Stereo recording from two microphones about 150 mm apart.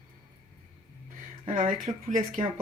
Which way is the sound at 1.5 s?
60° right (ahead or behind).